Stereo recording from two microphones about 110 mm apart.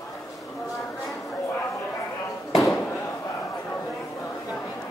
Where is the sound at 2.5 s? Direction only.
30° left (ahead or behind).